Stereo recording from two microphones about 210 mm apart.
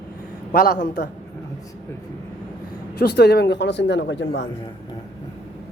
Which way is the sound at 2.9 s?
50° left (ahead or behind).